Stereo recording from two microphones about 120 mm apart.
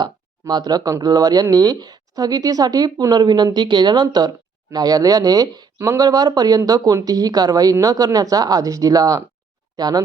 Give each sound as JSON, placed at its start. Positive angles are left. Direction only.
{"t": 0.0, "sound": "speech", "side_deg": -35}